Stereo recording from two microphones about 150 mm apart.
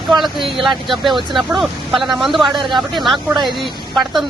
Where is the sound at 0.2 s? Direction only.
Centre (ahead or behind).